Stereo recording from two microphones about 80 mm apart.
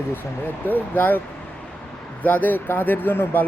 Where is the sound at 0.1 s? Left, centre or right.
Left.